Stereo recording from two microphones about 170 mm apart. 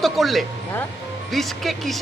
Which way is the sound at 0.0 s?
Centre (ahead or behind).